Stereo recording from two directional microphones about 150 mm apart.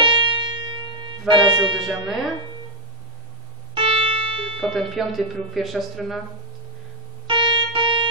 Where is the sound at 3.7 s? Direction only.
35° right (ahead or behind).